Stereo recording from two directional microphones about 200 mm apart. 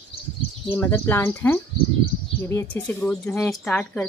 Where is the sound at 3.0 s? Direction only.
5° left (ahead or behind).